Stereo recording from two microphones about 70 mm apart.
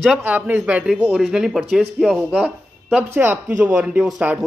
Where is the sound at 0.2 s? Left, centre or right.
Right; by 2.1 s centre.